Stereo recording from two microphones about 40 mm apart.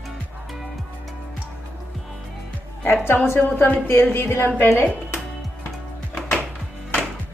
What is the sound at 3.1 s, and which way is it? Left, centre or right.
Speech, left.